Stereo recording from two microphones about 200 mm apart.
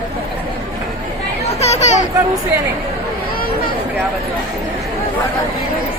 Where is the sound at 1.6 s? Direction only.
35° left (ahead or behind).